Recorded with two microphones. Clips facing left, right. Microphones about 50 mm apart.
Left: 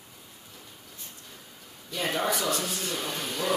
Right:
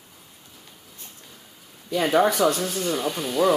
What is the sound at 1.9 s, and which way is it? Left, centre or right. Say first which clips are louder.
Speech: right 10 dB; right.